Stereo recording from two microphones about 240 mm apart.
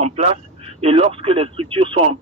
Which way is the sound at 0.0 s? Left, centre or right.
Right.